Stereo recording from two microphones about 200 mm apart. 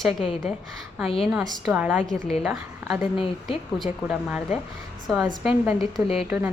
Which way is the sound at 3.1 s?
25° left (ahead or behind).